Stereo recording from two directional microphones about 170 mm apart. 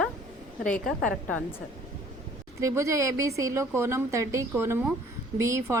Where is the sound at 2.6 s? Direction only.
15° right (ahead or behind).